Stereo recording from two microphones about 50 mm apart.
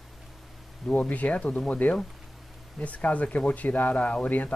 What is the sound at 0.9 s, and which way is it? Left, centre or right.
Speech, left.